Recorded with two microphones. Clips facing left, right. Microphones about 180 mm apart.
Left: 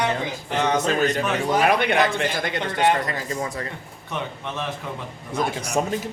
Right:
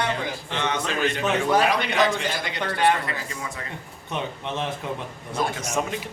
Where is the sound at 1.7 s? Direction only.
55° left (ahead or behind).